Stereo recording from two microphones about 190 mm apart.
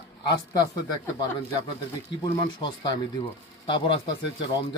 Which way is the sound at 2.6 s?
25° left (ahead or behind).